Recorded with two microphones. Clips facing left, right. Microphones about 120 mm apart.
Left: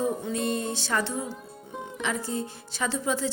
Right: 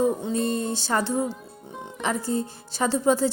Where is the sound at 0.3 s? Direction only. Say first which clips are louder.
Right 3 dB; 35° right (ahead or behind).